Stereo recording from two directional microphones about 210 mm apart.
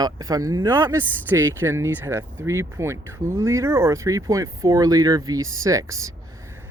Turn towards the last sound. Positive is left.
turn(degrees=-15)  # may be behind; listen again after turning